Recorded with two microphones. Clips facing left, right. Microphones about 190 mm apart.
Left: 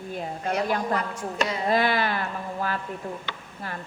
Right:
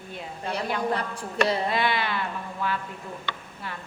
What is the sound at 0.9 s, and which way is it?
Speech, 30° right (ahead or behind).